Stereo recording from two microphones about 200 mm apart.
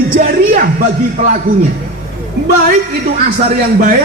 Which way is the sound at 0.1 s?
45° right (ahead or behind).